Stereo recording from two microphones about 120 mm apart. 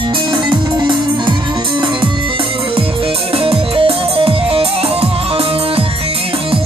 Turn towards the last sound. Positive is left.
turn(degrees=-55)  # may be behind; listen again after turning